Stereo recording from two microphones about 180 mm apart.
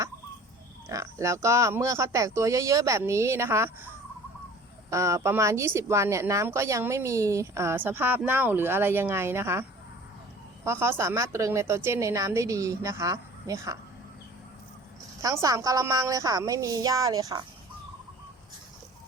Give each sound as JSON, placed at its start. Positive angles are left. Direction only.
{"t": 0.9, "sound": "a woman's voice", "side_deg": -15}
{"t": 4.9, "sound": "a woman's voice", "side_deg": -15}
{"t": 15.2, "sound": "a woman's voice", "side_deg": -20}